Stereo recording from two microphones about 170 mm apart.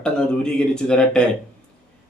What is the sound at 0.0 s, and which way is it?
A man's voice, 5° left (ahead or behind).